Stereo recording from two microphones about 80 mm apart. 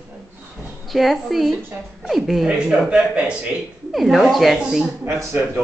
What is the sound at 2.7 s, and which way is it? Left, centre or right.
Speech, centre.